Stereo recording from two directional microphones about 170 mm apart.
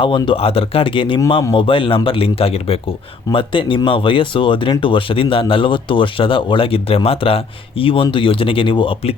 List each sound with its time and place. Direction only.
0.0 s speech: 30° left (ahead or behind)